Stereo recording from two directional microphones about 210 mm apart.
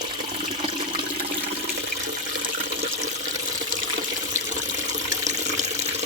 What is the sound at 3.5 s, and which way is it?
Water, 35° right (ahead or behind).